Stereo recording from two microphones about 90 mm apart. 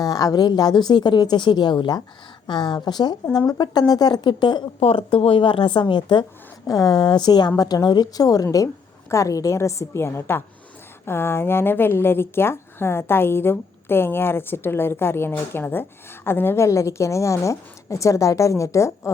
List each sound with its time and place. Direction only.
0.0 s speech: 45° left (ahead or behind)
4.9 s a woman's voice: 90° left; by 6.2 s 60° left (ahead or behind)
6.7 s a woman's voice: 50° left (ahead or behind)